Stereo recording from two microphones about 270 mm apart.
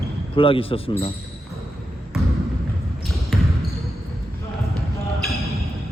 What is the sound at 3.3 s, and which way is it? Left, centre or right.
Basketball bounce, centre.